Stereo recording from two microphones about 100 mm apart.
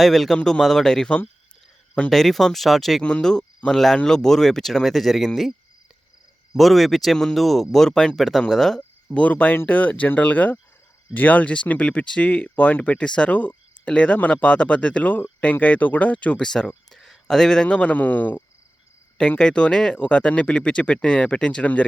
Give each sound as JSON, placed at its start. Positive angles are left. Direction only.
{"t": 0.0, "sound": "speech", "side_deg": 0}
{"t": 9.1, "sound": "speech", "side_deg": 15}